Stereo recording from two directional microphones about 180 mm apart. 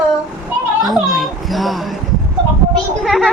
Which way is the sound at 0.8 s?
Centre (ahead or behind).